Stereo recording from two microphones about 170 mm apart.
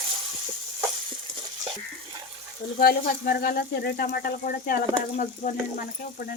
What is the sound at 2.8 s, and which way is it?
Speech, 60° left (ahead or behind).